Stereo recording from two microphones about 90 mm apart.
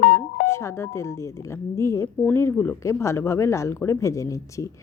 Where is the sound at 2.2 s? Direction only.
25° left (ahead or behind).